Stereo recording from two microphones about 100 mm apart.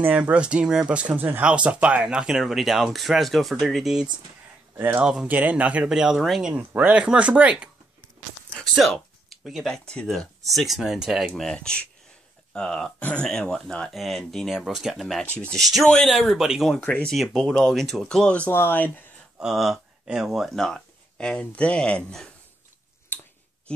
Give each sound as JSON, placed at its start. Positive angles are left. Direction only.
{"t": 0.0, "sound": "speech", "side_deg": -15}
{"t": 4.7, "sound": "speech", "side_deg": -20}
{"t": 5.0, "sound": "speech", "side_deg": -10}
{"t": 6.5, "sound": "speech", "side_deg": -15}
{"t": 8.7, "sound": "a sound", "side_deg": 0}
{"t": 9.8, "sound": "speech", "side_deg": 5}
{"t": 16.8, "sound": "speech", "side_deg": 15}
{"t": 17.1, "sound": "speech", "side_deg": 0}
{"t": 18.5, "sound": "speech", "side_deg": 20}
{"t": 19.3, "sound": "speech", "side_deg": -5}